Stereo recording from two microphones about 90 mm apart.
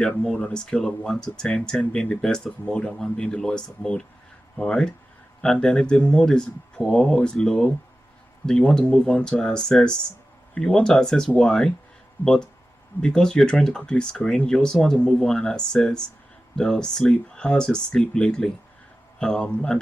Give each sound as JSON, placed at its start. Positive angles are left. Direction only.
{"t": 0.0, "sound": "speech", "side_deg": 15}
{"t": 12.2, "sound": "speech", "side_deg": 25}
{"t": 13.0, "sound": "speech", "side_deg": 10}